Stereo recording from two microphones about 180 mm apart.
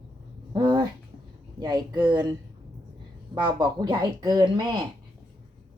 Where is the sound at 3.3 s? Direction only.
25° right (ahead or behind).